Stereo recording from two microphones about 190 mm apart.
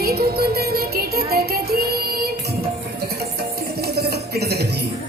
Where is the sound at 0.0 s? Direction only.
55° right (ahead or behind).